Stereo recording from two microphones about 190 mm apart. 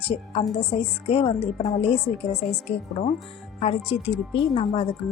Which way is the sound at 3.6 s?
30° left (ahead or behind).